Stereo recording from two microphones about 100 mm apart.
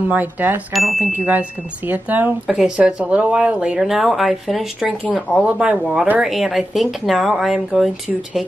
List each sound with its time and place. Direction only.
0.1 s speech: 15° right (ahead or behind)
0.7 s speech: centre (ahead or behind)
1.9 s speech: 20° right (ahead or behind)
2.4 s speech: 5° right (ahead or behind)